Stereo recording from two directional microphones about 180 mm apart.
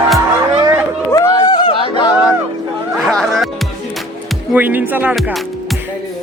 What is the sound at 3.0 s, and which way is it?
Music, centre (ahead or behind).